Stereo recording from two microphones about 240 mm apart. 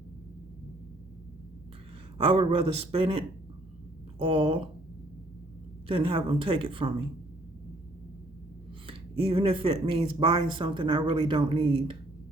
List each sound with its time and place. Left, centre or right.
2.1 s speech: right
5.9 s speech: right
8.9 s speech: right